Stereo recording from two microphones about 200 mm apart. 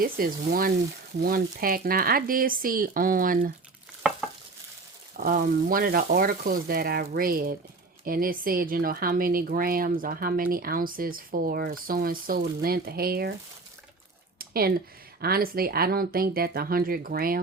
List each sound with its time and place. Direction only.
0.0 s speech: 45° right (ahead or behind)
5.1 s speech: 45° right (ahead or behind)
14.3 s a sound: 50° right (ahead or behind)
15.2 s speech: 50° right (ahead or behind)